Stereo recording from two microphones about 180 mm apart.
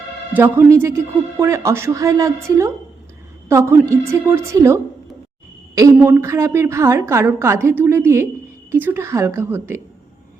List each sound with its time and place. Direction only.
0.3 s a woman's voice: 15° right (ahead or behind)